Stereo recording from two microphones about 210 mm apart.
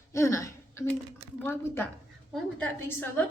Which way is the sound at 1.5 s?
10° left (ahead or behind).